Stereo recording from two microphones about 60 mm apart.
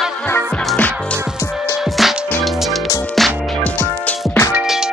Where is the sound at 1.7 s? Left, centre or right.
Centre.